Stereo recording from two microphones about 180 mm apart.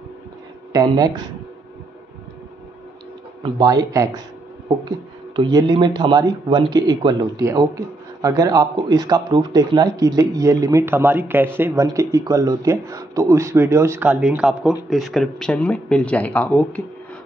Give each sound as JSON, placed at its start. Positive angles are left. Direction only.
{"t": 0.7, "sound": "speech", "side_deg": -20}
{"t": 3.5, "sound": "speech", "side_deg": -20}